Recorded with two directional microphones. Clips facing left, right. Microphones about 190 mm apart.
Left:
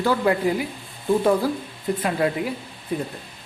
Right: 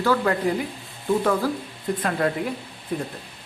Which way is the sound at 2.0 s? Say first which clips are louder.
Left 1 dB; 10° left (ahead or behind).